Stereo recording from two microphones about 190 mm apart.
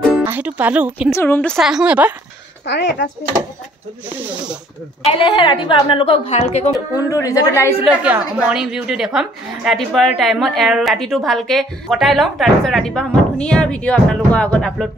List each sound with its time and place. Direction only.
0.2 s speech: 10° right (ahead or behind)
1.1 s a woman's voice: 10° left (ahead or behind); by 2.1 s 5° right (ahead or behind)
2.6 s speech: 65° left (ahead or behind)
4.1 s speech: 10° right (ahead or behind)
5.1 s a woman's voice: 25° left (ahead or behind)
6.7 s a woman's voice: 20° left (ahead or behind)
7.8 s a woman's voice: 5° right (ahead or behind)